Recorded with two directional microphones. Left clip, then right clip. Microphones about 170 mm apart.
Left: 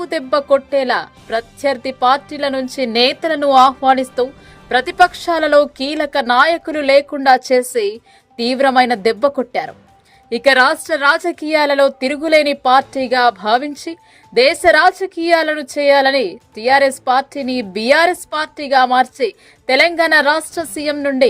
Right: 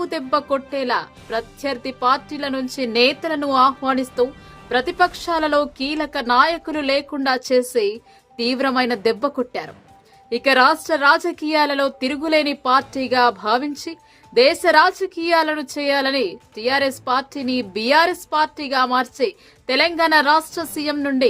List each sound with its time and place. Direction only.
0.0 s a woman's voice: 20° left (ahead or behind)